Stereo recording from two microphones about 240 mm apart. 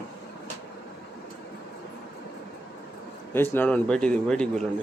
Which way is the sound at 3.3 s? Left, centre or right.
Centre.